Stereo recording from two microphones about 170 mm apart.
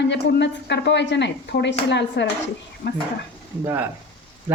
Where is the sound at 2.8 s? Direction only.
70° left (ahead or behind).